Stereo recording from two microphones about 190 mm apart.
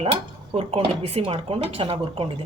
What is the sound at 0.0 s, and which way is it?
Speech, 30° right (ahead or behind).